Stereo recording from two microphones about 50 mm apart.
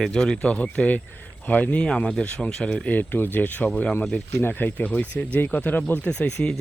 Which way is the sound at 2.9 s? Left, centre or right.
Left.